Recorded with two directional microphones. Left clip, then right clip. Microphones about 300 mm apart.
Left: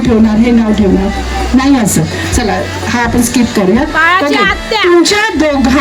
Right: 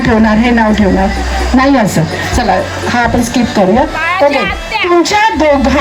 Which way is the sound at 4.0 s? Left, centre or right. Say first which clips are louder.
Left 2 dB; left.